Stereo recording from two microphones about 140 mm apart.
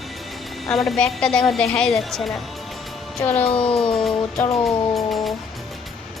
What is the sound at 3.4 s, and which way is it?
Speech, 40° left (ahead or behind).